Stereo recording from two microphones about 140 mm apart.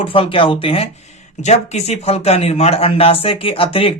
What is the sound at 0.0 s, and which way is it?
Speech, 40° left (ahead or behind).